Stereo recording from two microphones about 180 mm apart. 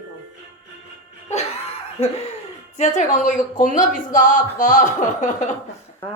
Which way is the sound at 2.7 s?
40° left (ahead or behind).